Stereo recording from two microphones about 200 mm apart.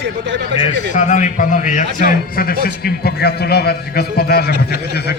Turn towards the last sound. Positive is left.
turn(degrees=50)  # may be behind; listen again after turning